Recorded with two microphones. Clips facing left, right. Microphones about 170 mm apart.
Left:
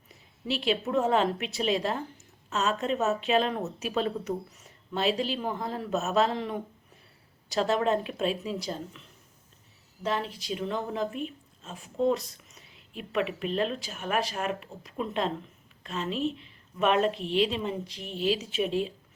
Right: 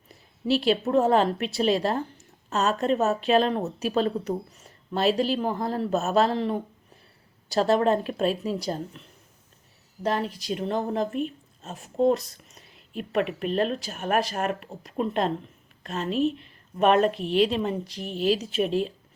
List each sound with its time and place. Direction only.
0.1 s a woman's voice: 35° right (ahead or behind)
10.0 s a woman's voice: 40° right (ahead or behind)
17.1 s a woman's voice: 5° right (ahead or behind)
17.3 s a woman's voice: 45° right (ahead or behind)